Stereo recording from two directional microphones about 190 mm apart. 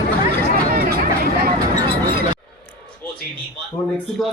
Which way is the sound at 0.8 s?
55° right (ahead or behind).